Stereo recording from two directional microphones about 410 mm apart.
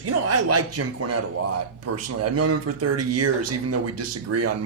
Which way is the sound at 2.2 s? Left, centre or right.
Right.